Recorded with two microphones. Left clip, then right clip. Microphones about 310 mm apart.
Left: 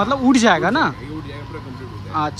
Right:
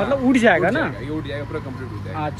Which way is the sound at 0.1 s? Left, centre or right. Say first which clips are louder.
Right 1 dB; centre.